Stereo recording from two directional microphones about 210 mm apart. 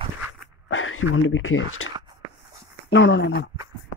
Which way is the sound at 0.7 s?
70° left (ahead or behind).